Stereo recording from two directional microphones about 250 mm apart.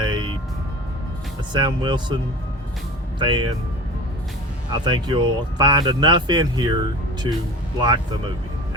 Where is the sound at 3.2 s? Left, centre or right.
Centre.